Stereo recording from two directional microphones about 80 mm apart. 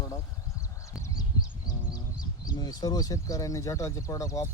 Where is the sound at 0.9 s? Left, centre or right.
Left.